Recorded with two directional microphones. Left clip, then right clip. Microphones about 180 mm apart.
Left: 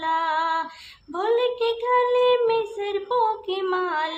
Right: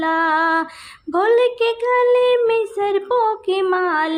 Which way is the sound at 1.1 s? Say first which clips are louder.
Right 7 dB; 35° right (ahead or behind).